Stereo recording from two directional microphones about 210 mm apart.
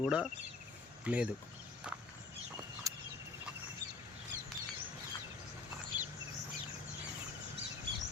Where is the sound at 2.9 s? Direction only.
15° right (ahead or behind).